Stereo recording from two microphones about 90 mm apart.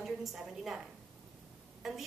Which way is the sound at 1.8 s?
5° right (ahead or behind).